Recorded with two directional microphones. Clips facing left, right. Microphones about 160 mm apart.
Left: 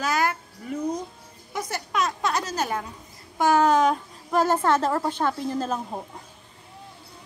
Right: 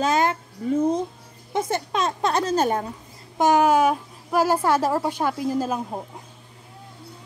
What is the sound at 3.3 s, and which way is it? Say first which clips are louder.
Speech: right 2 dB; 15° right (ahead or behind).